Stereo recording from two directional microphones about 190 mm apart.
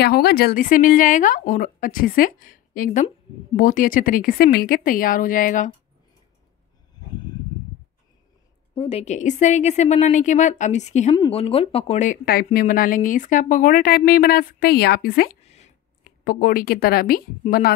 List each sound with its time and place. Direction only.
0.0 s speech: 55° left (ahead or behind)
8.7 s a woman's voice: 30° left (ahead or behind); by 15.3 s 50° left (ahead or behind)
15.4 s a sound: 35° left (ahead or behind)
16.0 s a woman's voice: 50° left (ahead or behind)